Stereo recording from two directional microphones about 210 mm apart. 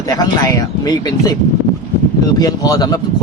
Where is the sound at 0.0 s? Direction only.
15° left (ahead or behind).